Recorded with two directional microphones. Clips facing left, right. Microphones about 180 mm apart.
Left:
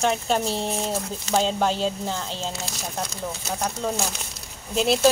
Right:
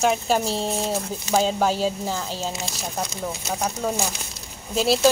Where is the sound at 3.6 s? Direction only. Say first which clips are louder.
Right 1 dB; 5° right (ahead or behind).